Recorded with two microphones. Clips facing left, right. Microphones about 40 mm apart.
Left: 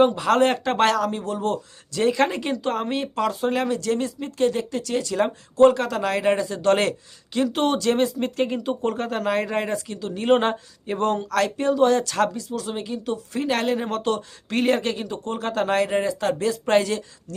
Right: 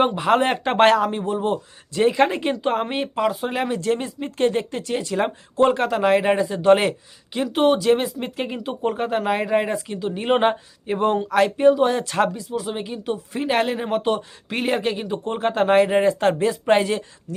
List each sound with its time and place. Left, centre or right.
0.0 s a man's voice: right
3.8 s a man's voice: right